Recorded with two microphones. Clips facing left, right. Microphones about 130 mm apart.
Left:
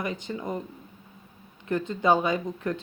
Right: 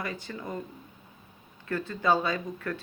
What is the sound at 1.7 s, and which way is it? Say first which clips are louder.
Speech: left 3 dB; 20° left (ahead or behind).